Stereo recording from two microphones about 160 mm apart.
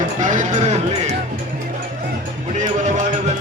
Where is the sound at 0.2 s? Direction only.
50° right (ahead or behind).